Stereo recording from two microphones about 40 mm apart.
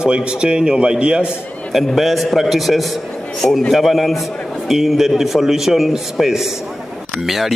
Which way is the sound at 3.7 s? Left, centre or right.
Centre.